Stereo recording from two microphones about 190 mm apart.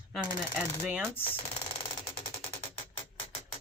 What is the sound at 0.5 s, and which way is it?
Speech, 5° right (ahead or behind).